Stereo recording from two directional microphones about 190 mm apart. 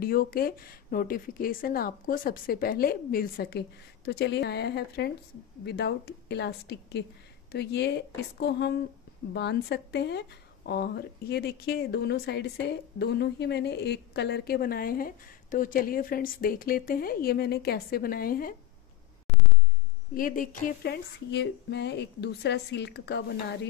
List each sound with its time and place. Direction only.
0.0 s speech: 50° left (ahead or behind)
20.2 s speech: 45° left (ahead or behind); by 23.7 s 60° left (ahead or behind)